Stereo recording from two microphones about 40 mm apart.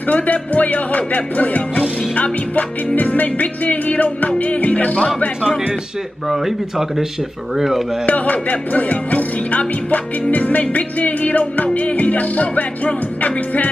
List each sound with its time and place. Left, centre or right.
0.1 s speech: left
6.2 s speech: centre
8.1 s speech: left